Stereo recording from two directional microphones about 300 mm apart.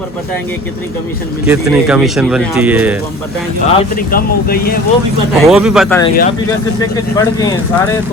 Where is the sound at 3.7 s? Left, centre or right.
Left.